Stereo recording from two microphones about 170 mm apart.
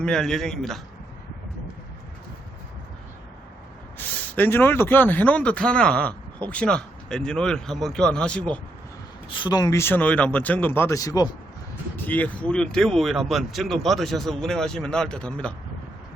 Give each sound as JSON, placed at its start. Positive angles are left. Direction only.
{"t": 0.0, "sound": "speech", "side_deg": 5}
{"t": 3.9, "sound": "speech", "side_deg": 10}
{"t": 9.3, "sound": "speech", "side_deg": 25}
{"t": 11.9, "sound": "speech", "side_deg": 10}